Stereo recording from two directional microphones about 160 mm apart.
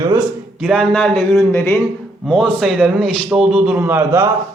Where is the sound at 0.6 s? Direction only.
Centre (ahead or behind).